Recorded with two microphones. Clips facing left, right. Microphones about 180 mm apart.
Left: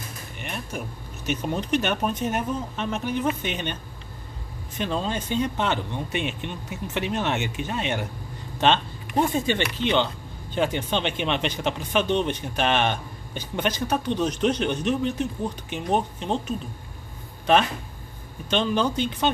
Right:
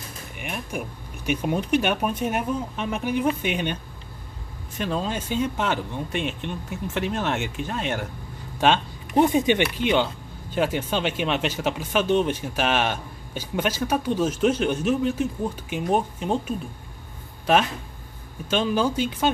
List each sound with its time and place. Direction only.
0.4 s speech: 10° right (ahead or behind)
4.7 s speech: 5° right (ahead or behind)
8.5 s a sound: 10° right (ahead or behind)
9.2 s speech: 20° right (ahead or behind)
18.5 s speech: 5° right (ahead or behind)